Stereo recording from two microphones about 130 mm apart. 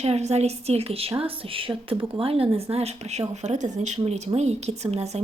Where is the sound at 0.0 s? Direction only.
55° right (ahead or behind).